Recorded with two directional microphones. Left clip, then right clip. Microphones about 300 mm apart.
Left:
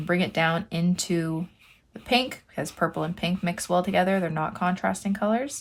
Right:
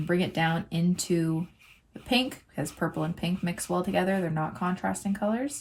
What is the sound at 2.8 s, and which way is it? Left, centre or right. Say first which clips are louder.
Speech: left 5 dB; centre.